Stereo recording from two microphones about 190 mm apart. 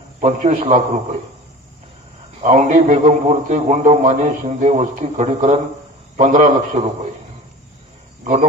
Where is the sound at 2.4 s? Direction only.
40° right (ahead or behind).